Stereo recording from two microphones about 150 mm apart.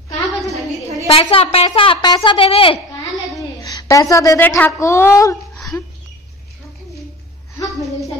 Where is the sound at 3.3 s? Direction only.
30° left (ahead or behind).